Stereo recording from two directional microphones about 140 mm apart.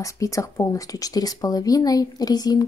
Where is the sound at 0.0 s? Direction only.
25° left (ahead or behind).